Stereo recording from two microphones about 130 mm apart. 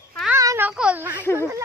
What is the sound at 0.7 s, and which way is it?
Speech, 10° right (ahead or behind).